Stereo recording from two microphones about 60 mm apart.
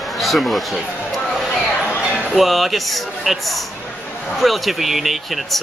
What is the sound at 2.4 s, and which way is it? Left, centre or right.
Speech, centre.